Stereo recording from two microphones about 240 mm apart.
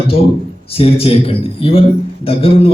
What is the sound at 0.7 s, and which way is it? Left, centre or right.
A man's voice, left.